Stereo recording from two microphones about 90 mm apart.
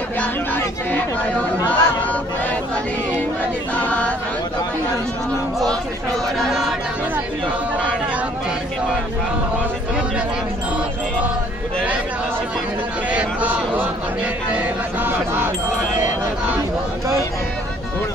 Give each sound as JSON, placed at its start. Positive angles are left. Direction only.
{"t": 0.2, "sound": "speech", "side_deg": 15}
{"t": 3.8, "sound": "choir", "side_deg": 15}
{"t": 13.1, "sound": "speech", "side_deg": -15}
{"t": 14.5, "sound": "a sound", "side_deg": -20}